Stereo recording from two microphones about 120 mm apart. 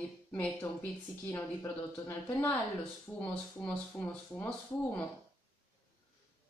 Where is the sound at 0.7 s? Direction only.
25° left (ahead or behind).